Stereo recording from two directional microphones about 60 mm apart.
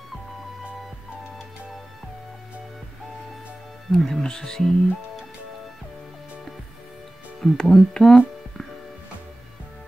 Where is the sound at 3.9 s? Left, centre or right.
Centre.